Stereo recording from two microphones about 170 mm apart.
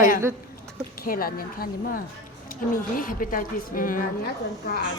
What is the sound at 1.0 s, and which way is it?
A woman's voice, 60° left (ahead or behind).